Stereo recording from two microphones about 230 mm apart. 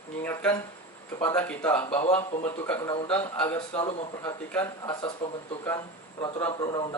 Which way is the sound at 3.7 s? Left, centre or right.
Left.